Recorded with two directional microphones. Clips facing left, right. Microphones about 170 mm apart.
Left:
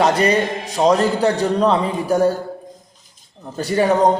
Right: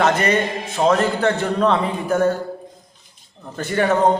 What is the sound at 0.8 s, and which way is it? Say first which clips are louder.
Speech: left 2 dB; 20° left (ahead or behind).